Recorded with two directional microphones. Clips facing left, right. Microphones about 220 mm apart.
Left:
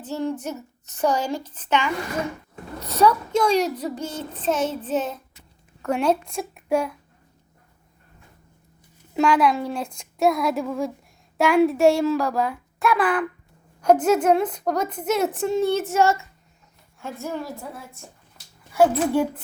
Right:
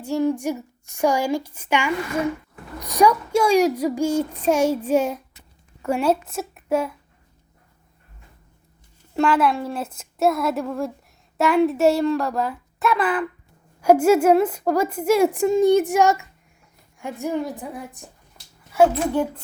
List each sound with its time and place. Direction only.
0.0 s a woman's voice: 10° right (ahead or behind)
9.1 s speech: centre (ahead or behind)